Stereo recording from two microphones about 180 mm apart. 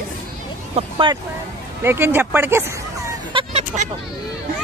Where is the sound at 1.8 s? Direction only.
10° right (ahead or behind).